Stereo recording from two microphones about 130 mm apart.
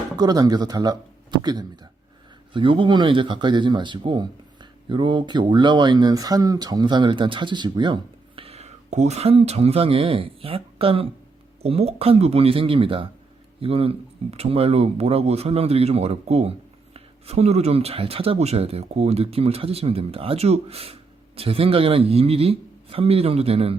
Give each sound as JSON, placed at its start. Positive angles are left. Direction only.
{"t": 0.2, "sound": "speech", "side_deg": -30}